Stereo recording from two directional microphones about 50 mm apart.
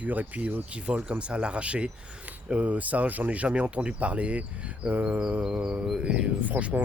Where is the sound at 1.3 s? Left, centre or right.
Right.